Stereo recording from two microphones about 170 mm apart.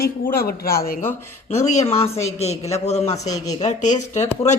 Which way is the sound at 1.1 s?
15° left (ahead or behind).